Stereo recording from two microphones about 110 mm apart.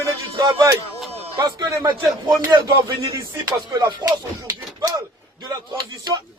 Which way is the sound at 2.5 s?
35° right (ahead or behind).